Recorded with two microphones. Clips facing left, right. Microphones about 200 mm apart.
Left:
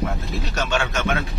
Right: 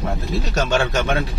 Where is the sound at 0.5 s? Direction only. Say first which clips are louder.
Right 4 dB; 35° right (ahead or behind).